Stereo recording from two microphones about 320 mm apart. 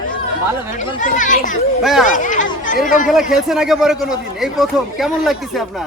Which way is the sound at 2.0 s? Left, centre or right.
Left.